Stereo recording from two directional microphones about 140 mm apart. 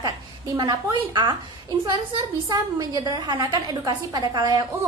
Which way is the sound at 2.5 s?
30° right (ahead or behind).